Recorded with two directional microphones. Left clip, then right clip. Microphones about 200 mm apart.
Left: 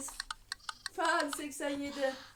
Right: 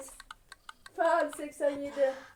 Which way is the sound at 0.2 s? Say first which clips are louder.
Left 8 dB; 55° left (ahead or behind).